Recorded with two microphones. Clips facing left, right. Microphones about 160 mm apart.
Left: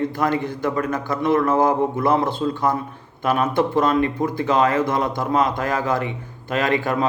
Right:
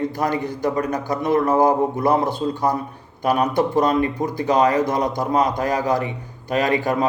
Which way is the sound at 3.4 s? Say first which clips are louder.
Even; 15° right (ahead or behind).